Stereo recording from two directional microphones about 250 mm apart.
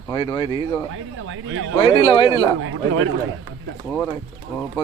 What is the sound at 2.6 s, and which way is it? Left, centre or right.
Speech, right.